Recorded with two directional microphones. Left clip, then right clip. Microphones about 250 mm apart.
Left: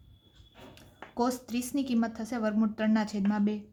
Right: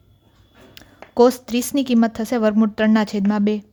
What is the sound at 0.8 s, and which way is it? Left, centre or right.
A woman's voice, right.